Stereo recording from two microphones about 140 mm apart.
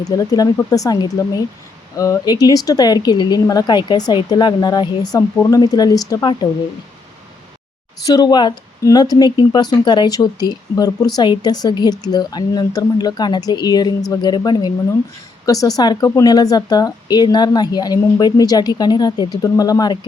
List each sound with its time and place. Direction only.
0.0 s speech: 25° left (ahead or behind)
8.0 s speech: 30° left (ahead or behind)